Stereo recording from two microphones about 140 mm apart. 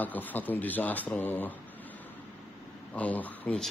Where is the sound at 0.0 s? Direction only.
10° left (ahead or behind).